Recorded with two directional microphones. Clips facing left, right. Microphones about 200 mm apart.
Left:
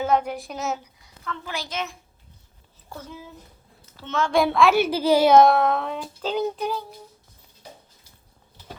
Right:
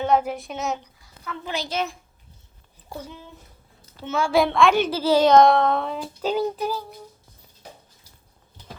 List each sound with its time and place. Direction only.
0.0 s a woman's voice: centre (ahead or behind)
1.7 s a child's voice: 35° right (ahead or behind)
4.0 s a child's voice: 10° right (ahead or behind)
4.4 s a child's voice: 5° left (ahead or behind)